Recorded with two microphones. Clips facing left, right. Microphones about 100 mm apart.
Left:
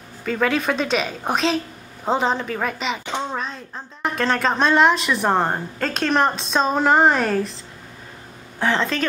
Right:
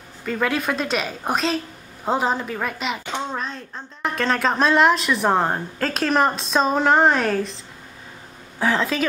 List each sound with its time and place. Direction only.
0.2 s a woman's voice: centre (ahead or behind)
8.5 s a woman's voice: 5° right (ahead or behind)